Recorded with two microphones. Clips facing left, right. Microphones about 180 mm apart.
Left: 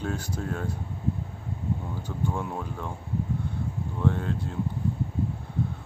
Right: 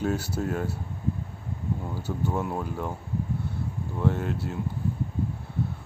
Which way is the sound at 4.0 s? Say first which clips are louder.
Right 1 dB; 10° right (ahead or behind).